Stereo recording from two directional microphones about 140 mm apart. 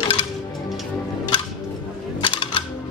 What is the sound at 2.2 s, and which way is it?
Music, 35° left (ahead or behind).